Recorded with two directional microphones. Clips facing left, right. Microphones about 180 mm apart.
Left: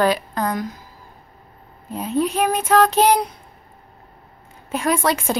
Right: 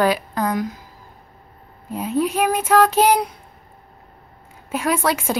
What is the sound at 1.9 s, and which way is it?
A woman's voice, 10° right (ahead or behind).